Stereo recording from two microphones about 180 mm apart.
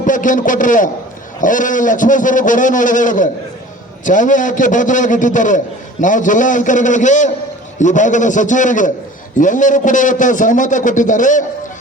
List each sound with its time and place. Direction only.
0.0 s a man's voice: 45° left (ahead or behind)